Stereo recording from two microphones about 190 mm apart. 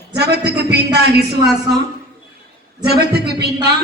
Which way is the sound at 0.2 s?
60° right (ahead or behind).